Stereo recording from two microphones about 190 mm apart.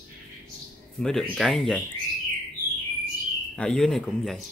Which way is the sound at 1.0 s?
Centre (ahead or behind).